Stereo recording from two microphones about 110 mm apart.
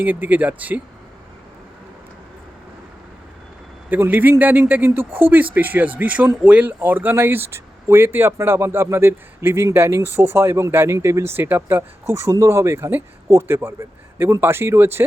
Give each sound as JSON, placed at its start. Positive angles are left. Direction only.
{"t": 0.0, "sound": "speech", "side_deg": -15}
{"t": 3.8, "sound": "speech", "side_deg": -15}